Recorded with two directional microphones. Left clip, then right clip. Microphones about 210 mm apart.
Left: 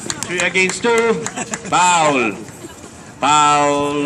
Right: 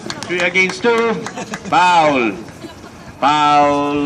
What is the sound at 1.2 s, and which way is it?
Speech, 30° left (ahead or behind).